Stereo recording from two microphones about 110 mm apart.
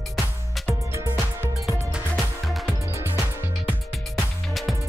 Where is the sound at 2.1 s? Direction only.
Centre (ahead or behind).